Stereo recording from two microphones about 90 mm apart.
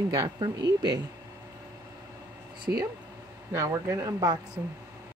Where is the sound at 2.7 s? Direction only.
25° right (ahead or behind).